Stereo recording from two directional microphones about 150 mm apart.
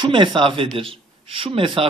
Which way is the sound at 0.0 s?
35° right (ahead or behind).